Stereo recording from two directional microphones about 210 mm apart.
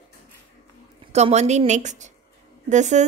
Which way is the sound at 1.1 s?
30° right (ahead or behind).